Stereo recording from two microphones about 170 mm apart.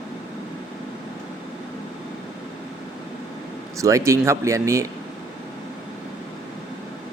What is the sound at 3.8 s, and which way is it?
Speech, 20° right (ahead or behind).